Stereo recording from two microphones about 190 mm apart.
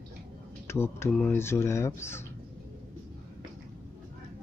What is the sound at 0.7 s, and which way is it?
Speech, 15° left (ahead or behind).